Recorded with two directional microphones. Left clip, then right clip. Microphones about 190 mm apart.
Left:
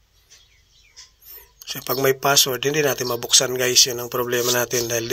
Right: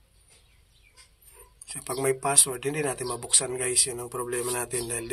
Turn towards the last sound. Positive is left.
turn(degrees=30)  # may be behind; listen again after turning